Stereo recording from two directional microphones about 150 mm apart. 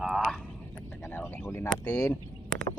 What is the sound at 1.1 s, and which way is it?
Speech, 15° left (ahead or behind).